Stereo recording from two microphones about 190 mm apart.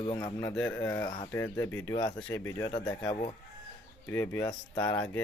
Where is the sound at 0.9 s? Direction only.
20° left (ahead or behind).